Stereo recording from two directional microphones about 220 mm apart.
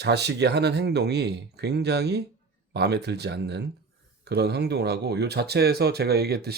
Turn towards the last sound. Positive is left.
turn(degrees=-45)  # may be behind; listen again after turning